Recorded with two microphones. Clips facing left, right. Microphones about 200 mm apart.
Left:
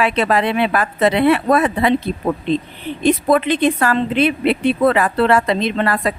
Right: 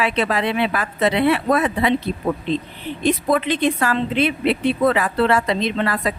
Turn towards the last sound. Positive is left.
turn(degrees=55)  # may be behind; listen again after turning